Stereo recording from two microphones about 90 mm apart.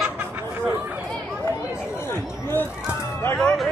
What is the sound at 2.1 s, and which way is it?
Chatter, 25° left (ahead or behind).